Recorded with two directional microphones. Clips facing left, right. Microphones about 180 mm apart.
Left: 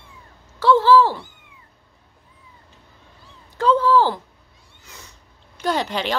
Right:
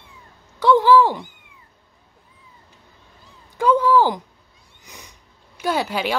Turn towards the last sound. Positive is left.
turn(degrees=-10)  # may be behind; listen again after turning